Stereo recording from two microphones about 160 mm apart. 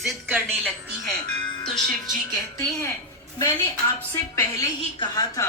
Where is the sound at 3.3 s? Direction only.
20° left (ahead or behind).